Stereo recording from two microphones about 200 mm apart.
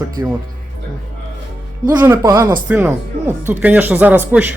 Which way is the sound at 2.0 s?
15° right (ahead or behind).